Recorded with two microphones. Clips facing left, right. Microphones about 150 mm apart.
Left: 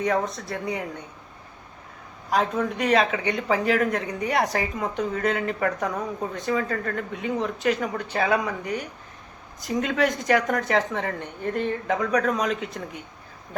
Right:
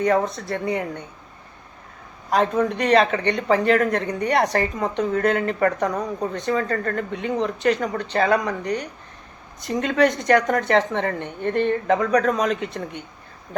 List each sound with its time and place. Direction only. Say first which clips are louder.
0.0 s speech: right 4 dB; centre (ahead or behind)
2.3 s speech: right 4 dB; centre (ahead or behind)